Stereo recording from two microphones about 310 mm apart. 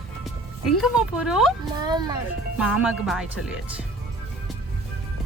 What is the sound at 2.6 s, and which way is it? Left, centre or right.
Speech, centre.